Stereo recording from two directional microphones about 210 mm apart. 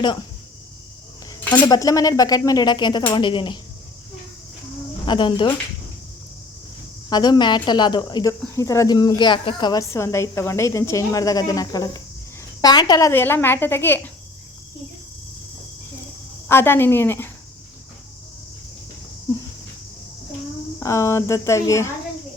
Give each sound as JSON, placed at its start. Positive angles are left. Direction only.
{"t": 1.3, "sound": "dishes", "side_deg": 10}
{"t": 1.6, "sound": "speech", "side_deg": 15}
{"t": 5.0, "sound": "speech", "side_deg": 20}
{"t": 7.1, "sound": "speech", "side_deg": 20}
{"t": 16.5, "sound": "speech", "side_deg": 10}
{"t": 20.7, "sound": "speech", "side_deg": 15}